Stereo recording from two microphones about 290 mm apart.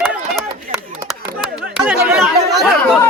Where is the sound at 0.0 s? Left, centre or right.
Centre.